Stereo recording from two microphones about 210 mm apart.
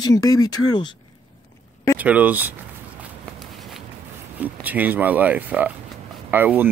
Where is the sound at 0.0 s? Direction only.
15° left (ahead or behind).